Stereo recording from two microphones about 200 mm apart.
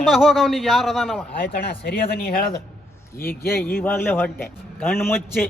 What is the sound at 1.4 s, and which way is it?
Speech, 55° left (ahead or behind).